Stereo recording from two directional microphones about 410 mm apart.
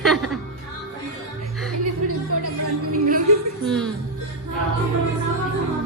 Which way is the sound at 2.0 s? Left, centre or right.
Right.